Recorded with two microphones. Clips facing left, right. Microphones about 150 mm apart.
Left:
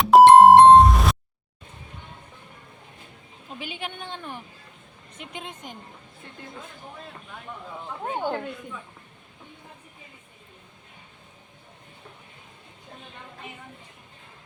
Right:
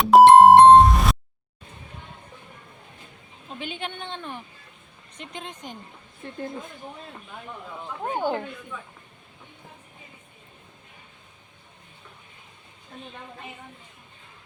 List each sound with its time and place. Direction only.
0.0 s music: centre (ahead or behind)
3.6 s a woman's voice: 5° left (ahead or behind)
8.1 s a woman's voice: centre (ahead or behind)